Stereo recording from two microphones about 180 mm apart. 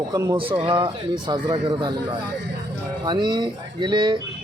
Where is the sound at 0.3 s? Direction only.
30° right (ahead or behind).